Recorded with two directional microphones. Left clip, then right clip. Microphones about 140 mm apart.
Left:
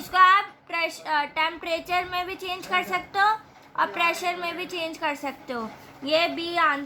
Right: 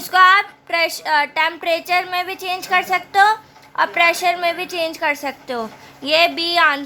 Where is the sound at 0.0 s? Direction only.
55° right (ahead or behind).